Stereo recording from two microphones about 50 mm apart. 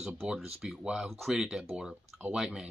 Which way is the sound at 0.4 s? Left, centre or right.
Centre.